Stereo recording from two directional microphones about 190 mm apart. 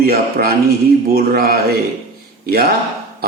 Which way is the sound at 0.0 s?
55° right (ahead or behind).